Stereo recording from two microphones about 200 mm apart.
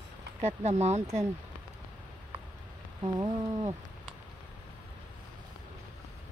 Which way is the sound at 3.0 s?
20° right (ahead or behind).